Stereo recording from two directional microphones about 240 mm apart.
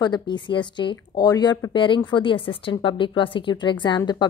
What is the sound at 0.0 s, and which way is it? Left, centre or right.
A woman's voice, centre.